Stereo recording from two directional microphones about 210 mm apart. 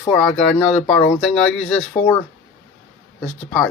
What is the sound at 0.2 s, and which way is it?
Speech, 5° left (ahead or behind).